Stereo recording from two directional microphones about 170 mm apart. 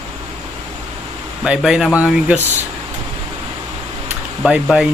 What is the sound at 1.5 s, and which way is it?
Speech, 5° right (ahead or behind).